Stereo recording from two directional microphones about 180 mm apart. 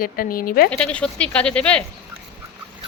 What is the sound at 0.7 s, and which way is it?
Speech, 5° left (ahead or behind).